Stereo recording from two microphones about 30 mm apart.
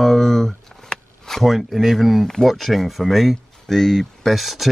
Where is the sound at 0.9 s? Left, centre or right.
Left.